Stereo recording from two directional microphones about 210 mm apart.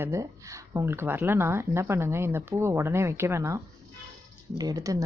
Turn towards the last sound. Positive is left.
turn(degrees=-15)  # may be behind; listen again after turning